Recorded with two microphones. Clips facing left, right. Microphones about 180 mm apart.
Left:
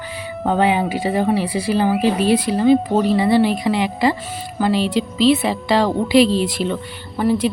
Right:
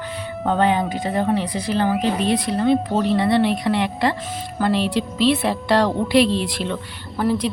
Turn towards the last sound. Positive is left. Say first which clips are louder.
# left 3 dB
turn(degrees=0)  # may be behind; listen again after turning